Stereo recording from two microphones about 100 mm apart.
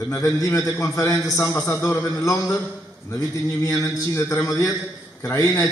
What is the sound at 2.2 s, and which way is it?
Speech, 35° left (ahead or behind).